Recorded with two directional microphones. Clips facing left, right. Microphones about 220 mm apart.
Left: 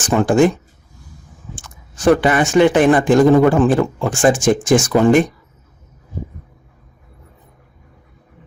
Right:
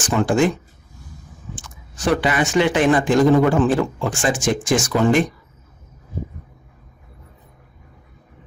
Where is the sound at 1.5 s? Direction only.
50° left (ahead or behind).